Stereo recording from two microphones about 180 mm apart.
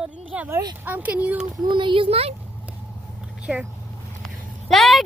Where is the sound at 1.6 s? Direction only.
25° right (ahead or behind).